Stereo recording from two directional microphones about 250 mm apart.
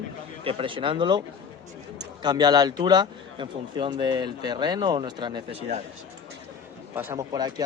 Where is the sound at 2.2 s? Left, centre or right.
Centre.